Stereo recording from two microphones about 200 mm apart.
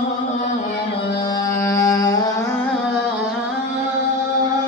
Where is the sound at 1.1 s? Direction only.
20° left (ahead or behind).